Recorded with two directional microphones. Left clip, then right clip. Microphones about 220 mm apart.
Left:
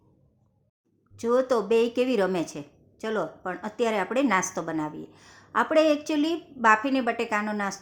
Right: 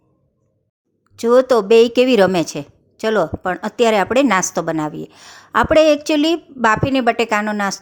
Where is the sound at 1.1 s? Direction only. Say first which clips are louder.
Right 11 dB; 35° right (ahead or behind).